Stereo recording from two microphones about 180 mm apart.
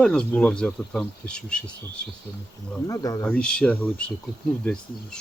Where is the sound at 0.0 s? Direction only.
5° left (ahead or behind).